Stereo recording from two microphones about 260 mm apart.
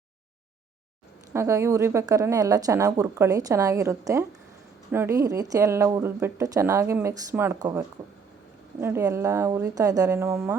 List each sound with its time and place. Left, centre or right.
1.3 s a woman's voice: centre